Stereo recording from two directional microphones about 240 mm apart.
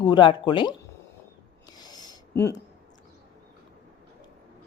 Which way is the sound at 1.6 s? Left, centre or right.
Centre.